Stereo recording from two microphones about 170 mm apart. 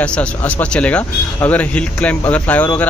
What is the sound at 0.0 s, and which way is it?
Speech, 5° left (ahead or behind).